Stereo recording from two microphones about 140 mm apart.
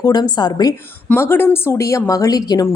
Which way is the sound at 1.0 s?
15° left (ahead or behind).